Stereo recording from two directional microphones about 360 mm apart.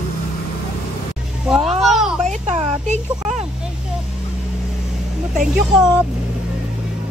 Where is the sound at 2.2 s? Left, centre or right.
Centre.